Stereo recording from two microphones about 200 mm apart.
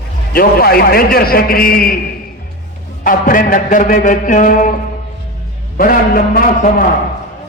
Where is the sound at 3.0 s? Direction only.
40° left (ahead or behind).